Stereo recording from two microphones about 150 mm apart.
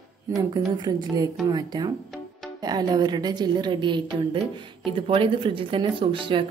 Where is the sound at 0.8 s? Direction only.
25° right (ahead or behind).